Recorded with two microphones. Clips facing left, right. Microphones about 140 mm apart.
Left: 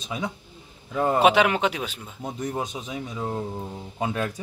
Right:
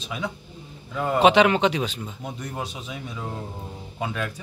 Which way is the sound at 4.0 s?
30° left (ahead or behind).